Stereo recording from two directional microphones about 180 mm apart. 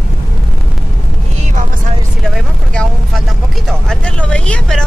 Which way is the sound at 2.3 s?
5° left (ahead or behind).